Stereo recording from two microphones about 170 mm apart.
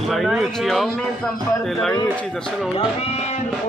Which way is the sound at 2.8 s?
40° left (ahead or behind).